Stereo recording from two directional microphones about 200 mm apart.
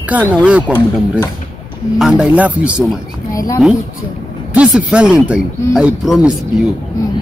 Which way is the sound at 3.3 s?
15° left (ahead or behind).